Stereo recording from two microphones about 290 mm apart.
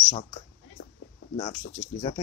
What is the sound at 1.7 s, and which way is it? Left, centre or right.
Speech, left.